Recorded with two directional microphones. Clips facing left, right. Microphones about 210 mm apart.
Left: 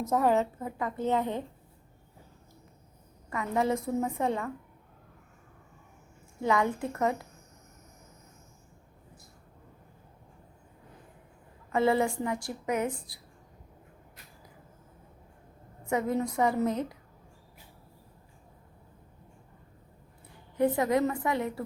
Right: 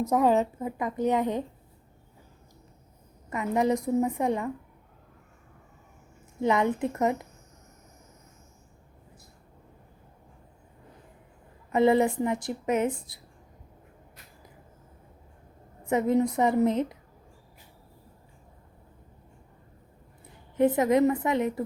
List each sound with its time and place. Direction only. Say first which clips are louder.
0.2 s a woman's voice: right 2 dB; 15° right (ahead or behind)
3.2 s a woman's voice: right 3 dB; 20° right (ahead or behind)
6.4 s a woman's voice: right 3 dB; 20° right (ahead or behind)
11.7 s a woman's voice: right 4 dB; 20° right (ahead or behind)
15.9 s a woman's voice: right 5 dB; 20° right (ahead or behind)
20.6 s a woman's voice: right 4 dB; 20° right (ahead or behind)